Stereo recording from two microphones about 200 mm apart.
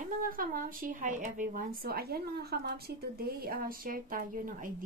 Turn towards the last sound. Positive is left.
turn(degrees=-45)  # may be behind; listen again after turning